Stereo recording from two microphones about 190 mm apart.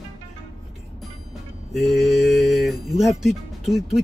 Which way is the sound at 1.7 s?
Centre (ahead or behind).